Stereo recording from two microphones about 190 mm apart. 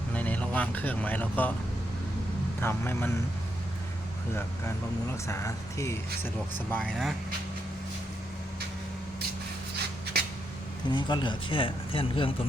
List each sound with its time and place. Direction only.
0.1 s speech: 5° left (ahead or behind)
2.6 s speech: 10° left (ahead or behind)
5.3 s speech: 15° left (ahead or behind)
6.7 s speech: 5° left (ahead or behind)
10.8 s speech: 25° left (ahead or behind)